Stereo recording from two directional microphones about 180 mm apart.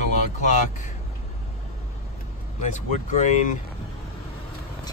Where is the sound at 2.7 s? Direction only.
40° left (ahead or behind).